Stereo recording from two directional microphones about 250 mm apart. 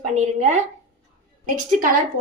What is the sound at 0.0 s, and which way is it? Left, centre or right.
Speech, right.